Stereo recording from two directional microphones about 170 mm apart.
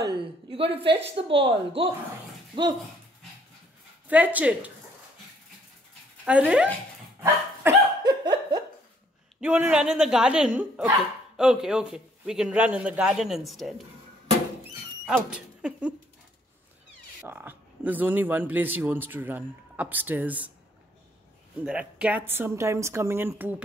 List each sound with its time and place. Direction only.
0.0 s a sound: 30° right (ahead or behind)
0.8 s a woman's voice: 90° right
1.1 s speech: 35° right (ahead or behind)
4.1 s speech: 10° right (ahead or behind)
6.2 s speech: 5° right (ahead or behind)
7.2 s dog: 15° right (ahead or behind)
8.1 s a sound: 25° right (ahead or behind)
9.4 s a man's voice: 10° right (ahead or behind)
15.0 s speech: 5° right (ahead or behind)
17.2 s speech: 10° right (ahead or behind)
21.6 s speech: 5° right (ahead or behind)